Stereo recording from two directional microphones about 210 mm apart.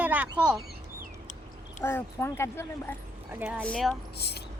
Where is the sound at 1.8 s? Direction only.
10° left (ahead or behind).